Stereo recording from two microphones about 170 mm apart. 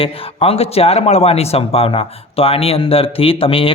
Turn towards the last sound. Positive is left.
turn(degrees=30)  # may be behind; listen again after turning